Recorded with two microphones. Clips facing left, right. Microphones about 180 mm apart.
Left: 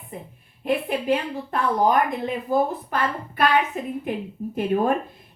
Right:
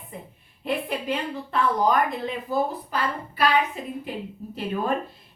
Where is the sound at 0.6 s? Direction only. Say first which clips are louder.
Left 4 dB; 50° left (ahead or behind).